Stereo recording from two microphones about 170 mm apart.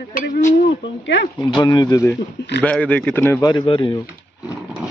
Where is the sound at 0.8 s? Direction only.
90° left.